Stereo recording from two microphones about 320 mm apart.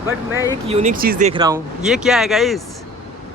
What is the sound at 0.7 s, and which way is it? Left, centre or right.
Speech, right.